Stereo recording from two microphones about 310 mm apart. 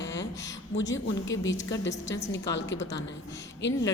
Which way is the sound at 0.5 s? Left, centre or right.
Left.